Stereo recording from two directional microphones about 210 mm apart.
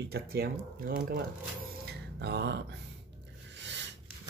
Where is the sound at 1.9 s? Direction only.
55° right (ahead or behind).